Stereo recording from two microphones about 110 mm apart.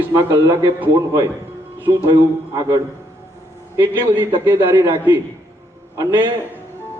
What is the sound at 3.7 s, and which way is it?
Speech, 20° right (ahead or behind).